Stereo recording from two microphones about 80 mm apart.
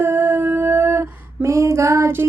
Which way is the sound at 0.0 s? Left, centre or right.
Right.